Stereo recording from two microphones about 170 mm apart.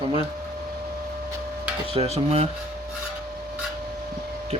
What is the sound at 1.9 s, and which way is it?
Speech, 35° right (ahead or behind).